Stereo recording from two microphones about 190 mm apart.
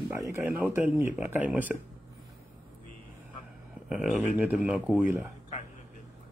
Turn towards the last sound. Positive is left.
turn(degrees=-10)  # may be behind; listen again after turning